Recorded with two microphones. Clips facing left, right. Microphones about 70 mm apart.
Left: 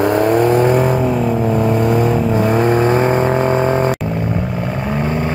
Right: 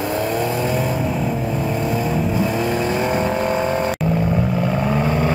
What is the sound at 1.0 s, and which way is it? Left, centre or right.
Vehicle, centre.